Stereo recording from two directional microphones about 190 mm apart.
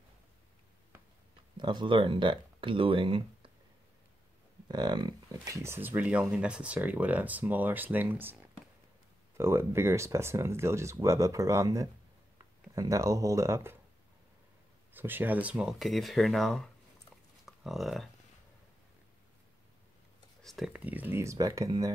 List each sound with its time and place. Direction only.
1.6 s speech: 25° right (ahead or behind)
4.6 s speech: 20° right (ahead or behind)
15.0 s speech: 10° right (ahead or behind)
20.4 s speech: centre (ahead or behind); by 21.9 s 20° right (ahead or behind)